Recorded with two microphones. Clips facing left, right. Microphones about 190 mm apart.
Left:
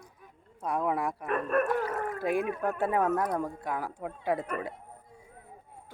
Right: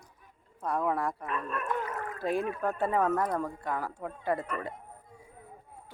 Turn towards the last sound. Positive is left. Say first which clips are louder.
# left 1 dB
turn(degrees=10)  # may be behind; listen again after turning